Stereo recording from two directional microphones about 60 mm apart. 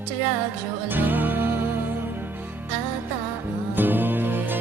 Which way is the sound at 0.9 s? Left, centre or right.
Right.